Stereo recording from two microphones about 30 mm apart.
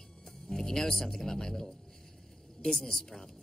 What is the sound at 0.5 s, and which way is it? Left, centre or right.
A woman's voice, centre.